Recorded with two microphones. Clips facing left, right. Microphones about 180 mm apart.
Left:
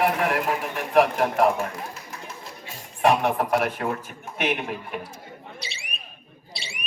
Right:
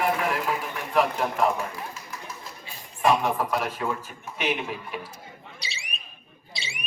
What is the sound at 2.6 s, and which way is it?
A man's voice, 65° left (ahead or behind).